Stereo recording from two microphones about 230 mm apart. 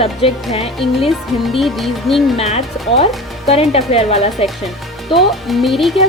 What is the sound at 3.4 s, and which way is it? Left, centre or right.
Speech, left.